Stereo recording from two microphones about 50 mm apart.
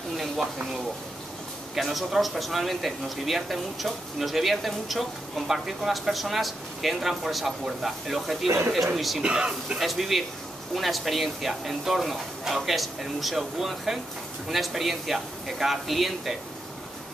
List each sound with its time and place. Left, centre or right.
1.8 s speech: centre
9.2 s speech: right
9.8 s speech: centre